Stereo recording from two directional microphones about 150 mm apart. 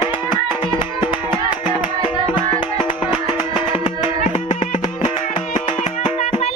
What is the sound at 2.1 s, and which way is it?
Music, 35° left (ahead or behind).